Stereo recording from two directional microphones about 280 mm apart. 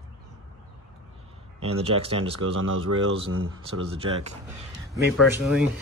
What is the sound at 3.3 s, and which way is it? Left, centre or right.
Speech, right.